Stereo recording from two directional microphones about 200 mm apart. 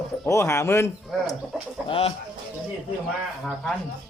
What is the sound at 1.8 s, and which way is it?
Speech, 30° left (ahead or behind).